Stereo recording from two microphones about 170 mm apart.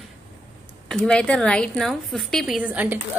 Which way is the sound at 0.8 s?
5° left (ahead or behind).